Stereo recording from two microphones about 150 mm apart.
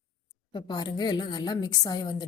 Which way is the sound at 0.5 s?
30° left (ahead or behind).